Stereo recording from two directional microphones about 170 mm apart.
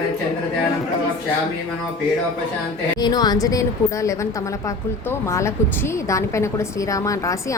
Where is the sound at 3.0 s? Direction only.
25° left (ahead or behind).